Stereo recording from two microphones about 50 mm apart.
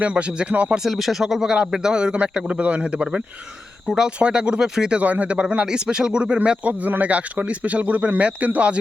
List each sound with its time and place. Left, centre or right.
0.0 s speech: right
0.9 s speech: centre; by 3.1 s right
3.8 s speech: centre
4.9 s speech: right